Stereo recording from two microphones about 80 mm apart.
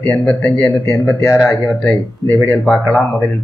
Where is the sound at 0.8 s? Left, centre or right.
Left.